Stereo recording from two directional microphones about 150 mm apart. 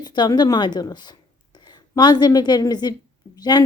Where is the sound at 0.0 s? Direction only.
30° left (ahead or behind).